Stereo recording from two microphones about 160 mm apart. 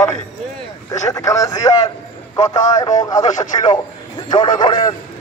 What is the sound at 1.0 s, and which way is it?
A man's voice, 20° left (ahead or behind).